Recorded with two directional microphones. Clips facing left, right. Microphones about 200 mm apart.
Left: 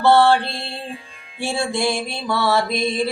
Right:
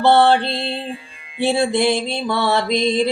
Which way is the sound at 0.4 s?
60° right (ahead or behind).